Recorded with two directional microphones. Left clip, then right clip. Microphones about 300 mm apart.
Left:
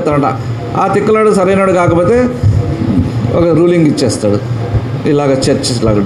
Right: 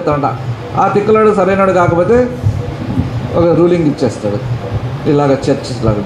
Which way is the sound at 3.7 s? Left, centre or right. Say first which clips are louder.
Left 2 dB; left.